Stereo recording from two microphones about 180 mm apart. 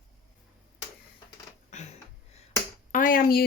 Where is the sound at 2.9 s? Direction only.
50° left (ahead or behind).